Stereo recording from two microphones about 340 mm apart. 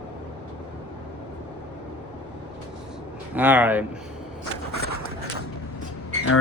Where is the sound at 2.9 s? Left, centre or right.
Centre.